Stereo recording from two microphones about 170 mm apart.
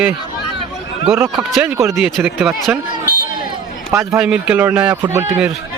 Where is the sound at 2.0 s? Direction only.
Centre (ahead or behind).